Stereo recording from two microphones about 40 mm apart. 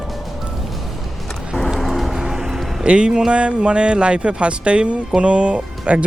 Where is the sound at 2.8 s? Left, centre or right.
Right.